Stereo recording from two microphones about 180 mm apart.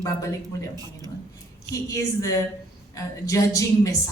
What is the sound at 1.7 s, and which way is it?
A woman's voice, 20° left (ahead or behind).